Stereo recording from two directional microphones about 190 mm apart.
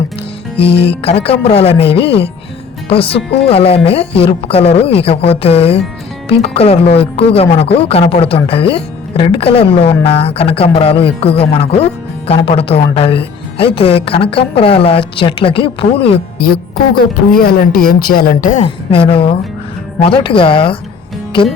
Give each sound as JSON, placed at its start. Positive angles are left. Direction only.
{"t": 0.6, "sound": "speech", "side_deg": 30}
{"t": 16.4, "sound": "speech", "side_deg": 55}
{"t": 18.6, "sound": "speech", "side_deg": 30}